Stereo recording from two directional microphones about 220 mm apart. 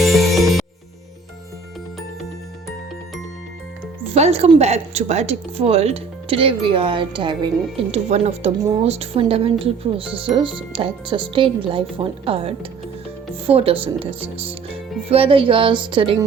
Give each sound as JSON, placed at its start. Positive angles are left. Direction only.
{"t": 0.0, "sound": "music", "side_deg": 0}
{"t": 4.1, "sound": "speech", "side_deg": -25}